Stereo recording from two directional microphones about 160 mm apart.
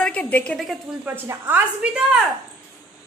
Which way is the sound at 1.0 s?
15° right (ahead or behind).